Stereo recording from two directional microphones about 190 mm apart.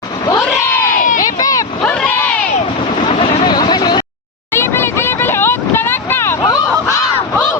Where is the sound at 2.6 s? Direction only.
35° left (ahead or behind).